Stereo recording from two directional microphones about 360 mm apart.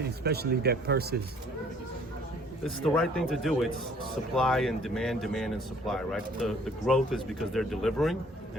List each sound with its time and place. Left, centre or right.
0.3 s speech: right
2.6 s a man's voice: centre